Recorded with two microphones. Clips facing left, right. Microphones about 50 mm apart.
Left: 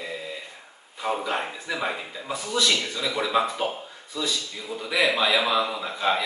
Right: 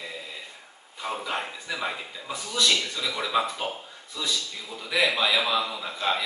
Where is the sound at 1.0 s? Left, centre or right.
Centre.